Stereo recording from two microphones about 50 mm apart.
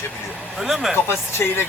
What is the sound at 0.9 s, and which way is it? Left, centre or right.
Speech, left.